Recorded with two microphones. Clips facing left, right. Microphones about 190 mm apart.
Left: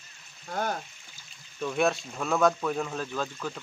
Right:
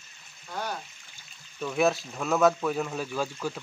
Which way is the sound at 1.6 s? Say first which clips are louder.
Right 1 dB; centre (ahead or behind).